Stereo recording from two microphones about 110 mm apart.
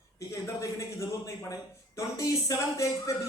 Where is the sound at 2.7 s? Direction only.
30° left (ahead or behind).